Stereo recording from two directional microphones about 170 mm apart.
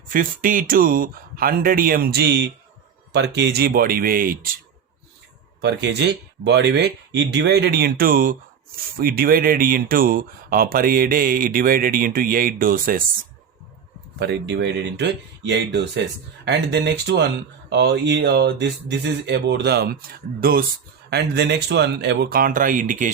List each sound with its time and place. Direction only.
0.1 s speech: 55° right (ahead or behind)
5.6 s speech: 85° right; by 13.1 s 55° right (ahead or behind)
14.2 s speech: 75° right (ahead or behind); by 20.7 s 60° right (ahead or behind)
21.1 s speech: 75° right (ahead or behind); by 23.1 s 50° right (ahead or behind)